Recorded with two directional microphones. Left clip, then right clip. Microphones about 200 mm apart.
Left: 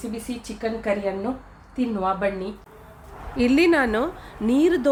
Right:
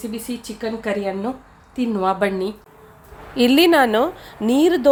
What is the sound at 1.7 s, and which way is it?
Speech, 55° right (ahead or behind).